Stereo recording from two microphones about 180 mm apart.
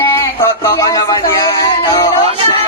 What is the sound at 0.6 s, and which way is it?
Music, 20° left (ahead or behind).